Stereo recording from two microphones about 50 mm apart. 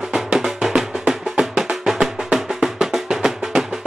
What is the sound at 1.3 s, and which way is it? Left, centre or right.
Music, right.